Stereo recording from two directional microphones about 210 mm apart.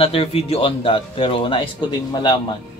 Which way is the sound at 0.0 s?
25° left (ahead or behind).